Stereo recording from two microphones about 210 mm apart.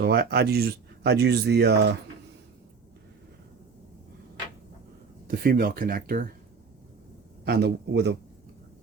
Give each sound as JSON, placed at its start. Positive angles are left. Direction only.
{"t": 0.0, "sound": "speech", "side_deg": -50}
{"t": 5.3, "sound": "speech", "side_deg": -45}
{"t": 7.4, "sound": "speech", "side_deg": -50}